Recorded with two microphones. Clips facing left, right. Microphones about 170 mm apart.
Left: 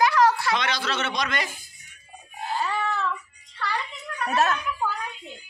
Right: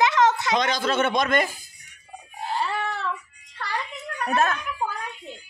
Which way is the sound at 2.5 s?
65° right (ahead or behind).